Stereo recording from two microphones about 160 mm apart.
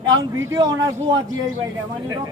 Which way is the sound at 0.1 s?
25° right (ahead or behind).